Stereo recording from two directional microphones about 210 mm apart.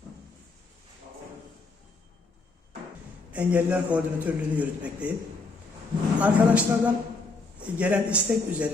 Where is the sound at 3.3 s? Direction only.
5° right (ahead or behind).